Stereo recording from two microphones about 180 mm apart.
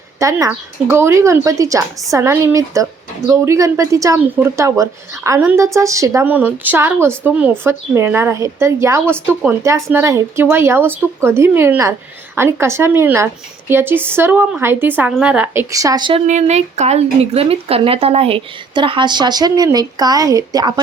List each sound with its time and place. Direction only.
0.2 s speech: 20° right (ahead or behind)
16.2 s speech: 40° right (ahead or behind); by 20.8 s 20° right (ahead or behind)